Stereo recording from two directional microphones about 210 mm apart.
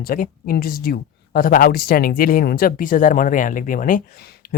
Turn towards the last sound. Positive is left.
turn(degrees=40)  # may be behind; listen again after turning